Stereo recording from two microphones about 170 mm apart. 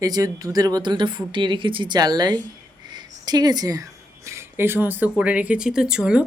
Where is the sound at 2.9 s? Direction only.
25° right (ahead or behind).